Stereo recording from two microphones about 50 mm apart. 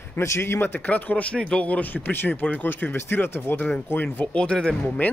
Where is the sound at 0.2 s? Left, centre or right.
Left.